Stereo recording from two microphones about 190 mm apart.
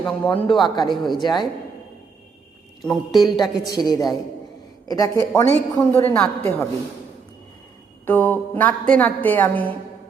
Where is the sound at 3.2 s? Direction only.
20° left (ahead or behind).